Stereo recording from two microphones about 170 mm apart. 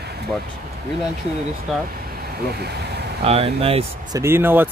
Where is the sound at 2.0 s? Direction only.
65° right (ahead or behind).